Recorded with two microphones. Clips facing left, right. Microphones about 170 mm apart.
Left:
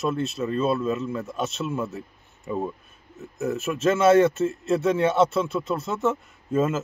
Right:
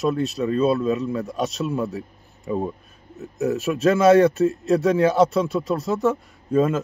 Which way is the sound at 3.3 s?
Centre (ahead or behind).